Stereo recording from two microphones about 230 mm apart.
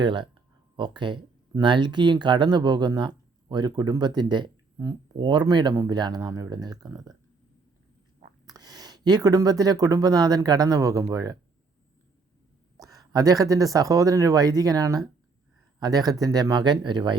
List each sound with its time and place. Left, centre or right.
0.0 s speech: centre
8.4 s speech: centre
12.7 s a sound: centre
13.7 s speech: centre